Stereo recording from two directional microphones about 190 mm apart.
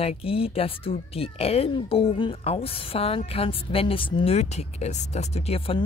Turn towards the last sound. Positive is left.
turn(degrees=30)  # may be behind; listen again after turning